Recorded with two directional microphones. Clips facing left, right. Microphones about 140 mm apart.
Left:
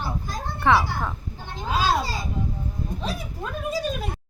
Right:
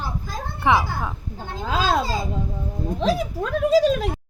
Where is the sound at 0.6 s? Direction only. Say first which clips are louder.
Even; 15° right (ahead or behind).